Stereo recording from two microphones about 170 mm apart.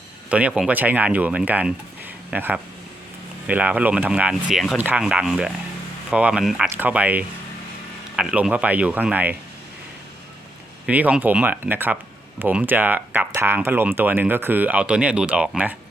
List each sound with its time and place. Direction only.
0.3 s speech: 10° right (ahead or behind)
10.8 s speech: 10° right (ahead or behind)